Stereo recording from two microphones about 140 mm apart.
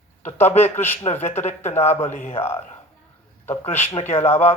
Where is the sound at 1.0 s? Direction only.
50° left (ahead or behind).